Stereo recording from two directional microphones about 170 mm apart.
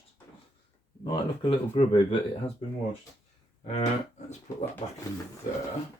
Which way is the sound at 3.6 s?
40° left (ahead or behind).